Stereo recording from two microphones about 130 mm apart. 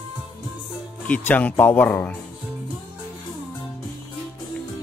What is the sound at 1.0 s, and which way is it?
Speech, 10° left (ahead or behind).